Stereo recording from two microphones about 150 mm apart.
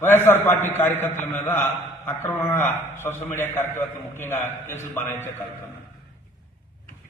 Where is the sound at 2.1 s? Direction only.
15° left (ahead or behind).